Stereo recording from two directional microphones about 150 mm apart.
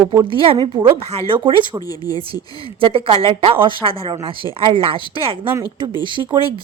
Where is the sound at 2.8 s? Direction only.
35° right (ahead or behind).